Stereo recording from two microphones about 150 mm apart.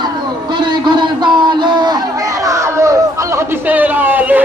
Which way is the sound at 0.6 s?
30° right (ahead or behind).